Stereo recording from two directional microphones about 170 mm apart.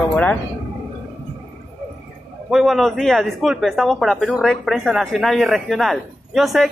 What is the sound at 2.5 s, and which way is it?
Speech, centre (ahead or behind).